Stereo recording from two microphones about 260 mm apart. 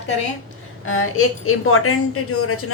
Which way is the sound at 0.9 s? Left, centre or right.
Left.